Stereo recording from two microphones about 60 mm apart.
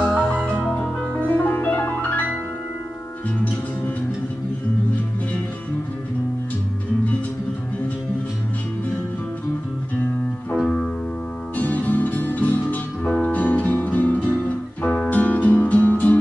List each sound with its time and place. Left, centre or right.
0.1 s music: left
0.7 s music: centre
1.2 s music: left
11.5 s music: left